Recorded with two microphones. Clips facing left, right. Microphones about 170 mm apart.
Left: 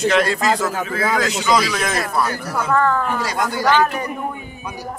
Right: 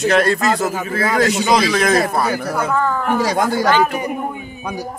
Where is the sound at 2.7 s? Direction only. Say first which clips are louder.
Left 2 dB; 5° right (ahead or behind).